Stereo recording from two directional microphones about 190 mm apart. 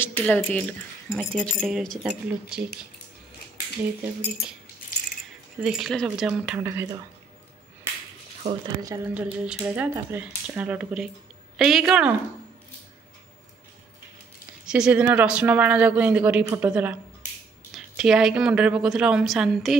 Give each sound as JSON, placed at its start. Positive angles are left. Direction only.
{"t": 0.0, "sound": "speech", "side_deg": 10}
{"t": 5.6, "sound": "speech", "side_deg": 0}
{"t": 8.6, "sound": "speech", "side_deg": -20}
{"t": 9.1, "sound": "speech", "side_deg": -5}
{"t": 14.7, "sound": "speech", "side_deg": -5}